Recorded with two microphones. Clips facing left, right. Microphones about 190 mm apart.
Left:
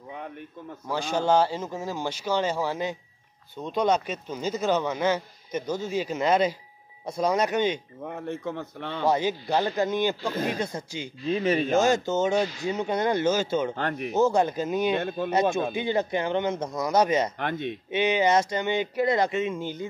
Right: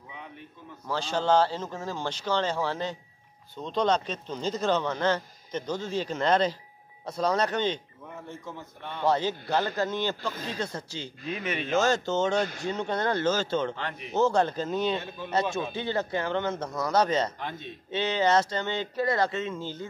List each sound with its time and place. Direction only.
0.8 s speech: 10° left (ahead or behind)
8.0 s a man's voice: 65° left (ahead or behind); by 9.0 s 85° left
9.0 s speech: 10° left (ahead or behind)
10.3 s speech: 60° left (ahead or behind)
10.6 s speech: 15° left (ahead or behind)
11.2 s speech: 30° left (ahead or behind)
11.7 s speech: 10° left (ahead or behind)
13.7 s speech: 50° left (ahead or behind)
14.1 s speech: 10° left (ahead or behind)
15.0 s speech: 55° left (ahead or behind)
15.7 s speech: 15° left (ahead or behind)
17.4 s a man's voice: 70° left (ahead or behind)
17.9 s speech: 15° left (ahead or behind)